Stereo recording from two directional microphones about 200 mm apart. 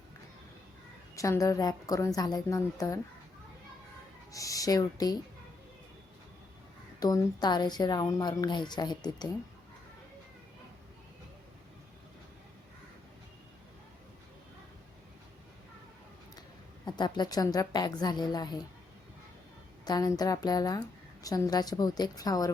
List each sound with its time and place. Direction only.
1.1 s a woman's voice: 15° left (ahead or behind)
4.3 s a woman's voice: 15° left (ahead or behind)
7.0 s a woman's voice: 20° left (ahead or behind)
16.8 s a woman's voice: 20° left (ahead or behind)
19.8 s a woman's voice: 20° left (ahead or behind)